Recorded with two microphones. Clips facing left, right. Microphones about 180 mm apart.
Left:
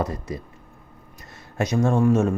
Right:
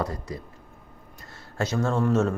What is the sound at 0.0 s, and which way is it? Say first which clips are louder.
Speech: left 3 dB; 20° left (ahead or behind).